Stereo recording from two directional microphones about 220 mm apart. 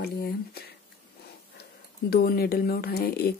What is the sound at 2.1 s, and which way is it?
Speech, 45° left (ahead or behind).